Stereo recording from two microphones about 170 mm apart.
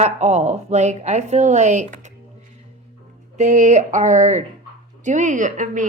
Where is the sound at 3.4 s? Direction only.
45° right (ahead or behind).